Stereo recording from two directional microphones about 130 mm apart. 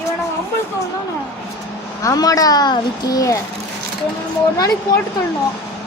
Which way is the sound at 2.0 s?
25° left (ahead or behind).